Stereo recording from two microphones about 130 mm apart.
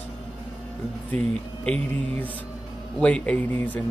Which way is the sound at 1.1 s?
55° right (ahead or behind).